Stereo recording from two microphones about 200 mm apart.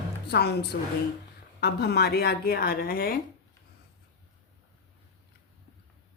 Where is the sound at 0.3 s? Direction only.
55° left (ahead or behind).